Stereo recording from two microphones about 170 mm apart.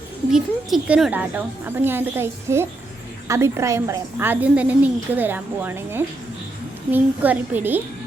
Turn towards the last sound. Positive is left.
turn(degrees=-10)  # may be behind; listen again after turning